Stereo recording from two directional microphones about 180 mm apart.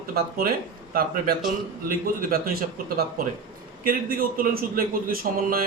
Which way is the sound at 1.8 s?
55° right (ahead or behind).